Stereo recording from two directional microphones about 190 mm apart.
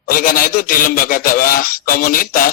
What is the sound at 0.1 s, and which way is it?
Speech, 50° left (ahead or behind).